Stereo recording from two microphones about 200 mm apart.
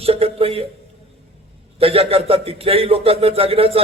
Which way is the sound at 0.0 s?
30° right (ahead or behind).